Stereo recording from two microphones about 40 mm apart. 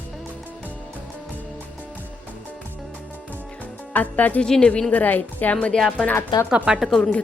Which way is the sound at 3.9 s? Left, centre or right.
Left.